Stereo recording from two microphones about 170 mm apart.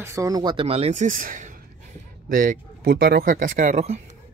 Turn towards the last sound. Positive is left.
turn(degrees=-40)  # may be behind; listen again after turning